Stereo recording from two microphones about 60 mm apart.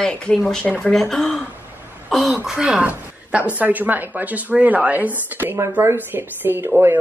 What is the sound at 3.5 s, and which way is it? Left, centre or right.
Speech, right.